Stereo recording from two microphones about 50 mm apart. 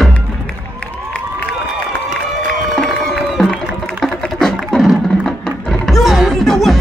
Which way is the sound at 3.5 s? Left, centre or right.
Centre.